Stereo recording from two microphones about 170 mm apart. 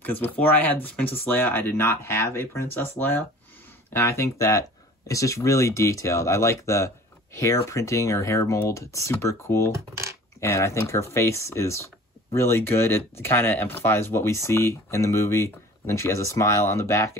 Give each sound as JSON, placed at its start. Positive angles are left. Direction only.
{"t": 0.0, "sound": "speech", "side_deg": 10}